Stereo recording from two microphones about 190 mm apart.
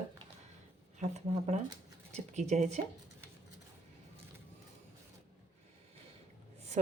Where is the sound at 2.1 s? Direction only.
40° right (ahead or behind).